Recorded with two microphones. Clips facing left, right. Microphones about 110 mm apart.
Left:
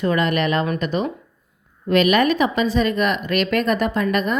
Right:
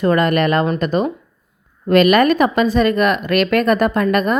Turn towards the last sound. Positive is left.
turn(degrees=-45)  # may be behind; listen again after turning